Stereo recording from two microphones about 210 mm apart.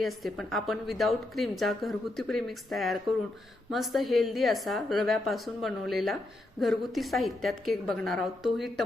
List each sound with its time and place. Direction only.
0.0 s a woman's voice: centre (ahead or behind)